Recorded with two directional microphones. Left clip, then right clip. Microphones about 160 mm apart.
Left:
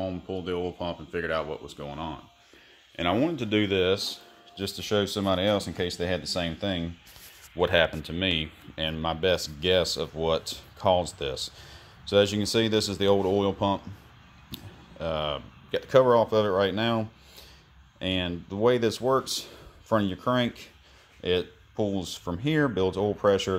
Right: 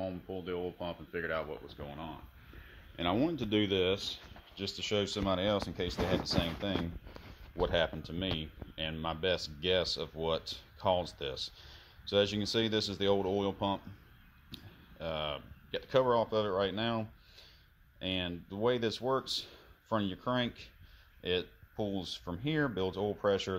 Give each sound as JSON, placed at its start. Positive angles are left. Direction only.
{"t": 0.0, "sound": "speech", "side_deg": 0}
{"t": 3.0, "sound": "speech", "side_deg": -25}